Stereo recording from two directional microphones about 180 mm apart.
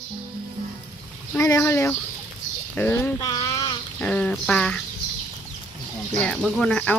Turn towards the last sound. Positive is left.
turn(degrees=5)  # may be behind; listen again after turning